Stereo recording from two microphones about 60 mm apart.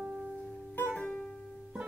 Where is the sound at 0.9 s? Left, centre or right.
Centre.